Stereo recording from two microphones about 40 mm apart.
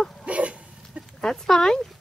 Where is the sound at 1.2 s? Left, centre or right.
Centre.